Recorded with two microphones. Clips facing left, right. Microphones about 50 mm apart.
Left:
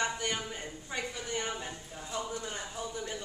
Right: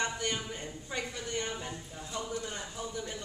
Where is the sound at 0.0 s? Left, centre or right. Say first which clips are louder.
Left 1 dB; centre.